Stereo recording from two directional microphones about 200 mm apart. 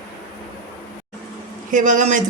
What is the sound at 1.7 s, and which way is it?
Speech, 40° right (ahead or behind).